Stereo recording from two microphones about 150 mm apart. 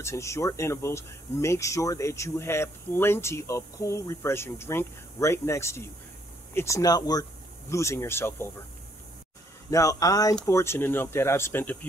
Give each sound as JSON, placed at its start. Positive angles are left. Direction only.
{"t": 0.0, "sound": "speech", "side_deg": 20}
{"t": 9.7, "sound": "speech", "side_deg": 20}